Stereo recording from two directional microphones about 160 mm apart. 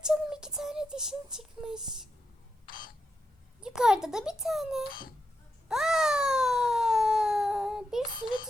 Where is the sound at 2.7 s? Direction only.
65° left (ahead or behind).